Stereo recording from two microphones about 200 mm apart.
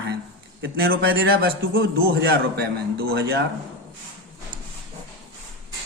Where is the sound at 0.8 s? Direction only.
50° right (ahead or behind).